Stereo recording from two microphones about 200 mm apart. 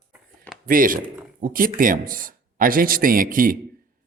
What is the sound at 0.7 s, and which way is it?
Speech, 45° right (ahead or behind).